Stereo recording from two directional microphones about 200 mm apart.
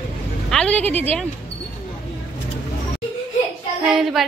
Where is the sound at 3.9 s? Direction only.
Centre (ahead or behind).